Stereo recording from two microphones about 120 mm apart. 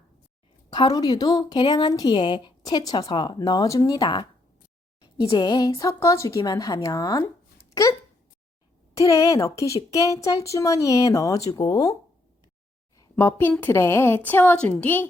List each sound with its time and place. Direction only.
0.7 s speech: 35° left (ahead or behind)
9.0 s speech: 30° left (ahead or behind)
13.0 s a sound: 20° left (ahead or behind)
13.5 s a woman's voice: 20° left (ahead or behind)